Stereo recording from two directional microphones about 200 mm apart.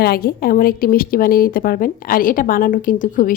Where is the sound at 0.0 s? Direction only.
50° left (ahead or behind).